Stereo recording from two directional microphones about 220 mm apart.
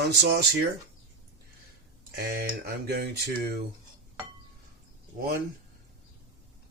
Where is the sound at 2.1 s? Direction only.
45° right (ahead or behind).